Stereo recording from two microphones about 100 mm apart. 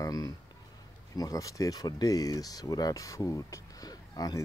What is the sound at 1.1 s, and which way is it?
Speech, 40° left (ahead or behind).